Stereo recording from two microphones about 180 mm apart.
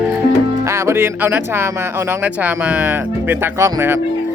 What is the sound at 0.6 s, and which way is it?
Speech, 15° right (ahead or behind).